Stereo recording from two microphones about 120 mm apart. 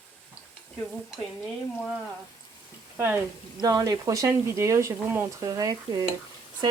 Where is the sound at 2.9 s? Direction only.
20° right (ahead or behind).